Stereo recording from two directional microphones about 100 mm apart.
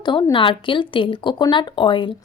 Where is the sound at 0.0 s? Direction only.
50° left (ahead or behind).